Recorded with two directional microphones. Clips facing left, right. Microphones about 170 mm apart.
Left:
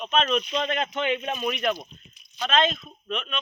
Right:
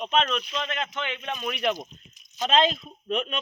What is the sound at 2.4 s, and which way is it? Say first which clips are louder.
Speech: right 1 dB; 30° right (ahead or behind).